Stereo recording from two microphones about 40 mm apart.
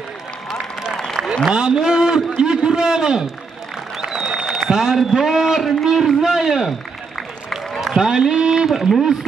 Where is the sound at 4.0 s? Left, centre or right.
Centre.